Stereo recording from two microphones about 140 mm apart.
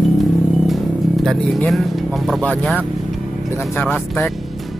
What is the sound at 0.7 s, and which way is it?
Speech, centre (ahead or behind).